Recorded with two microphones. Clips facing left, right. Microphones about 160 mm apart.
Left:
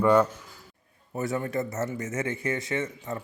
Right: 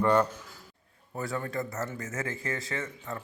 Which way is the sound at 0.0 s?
5° left (ahead or behind).